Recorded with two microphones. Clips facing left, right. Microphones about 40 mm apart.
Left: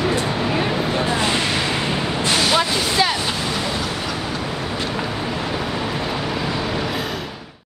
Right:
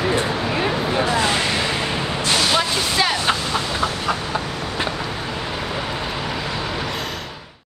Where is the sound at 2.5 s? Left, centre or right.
Centre.